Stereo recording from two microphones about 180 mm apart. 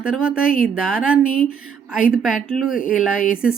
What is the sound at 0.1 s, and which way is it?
Speech, 5° right (ahead or behind).